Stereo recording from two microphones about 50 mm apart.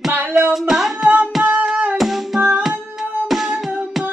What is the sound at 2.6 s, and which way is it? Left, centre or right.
Music, centre.